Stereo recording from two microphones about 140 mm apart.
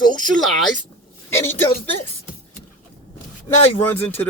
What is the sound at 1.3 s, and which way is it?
Speech, 15° left (ahead or behind).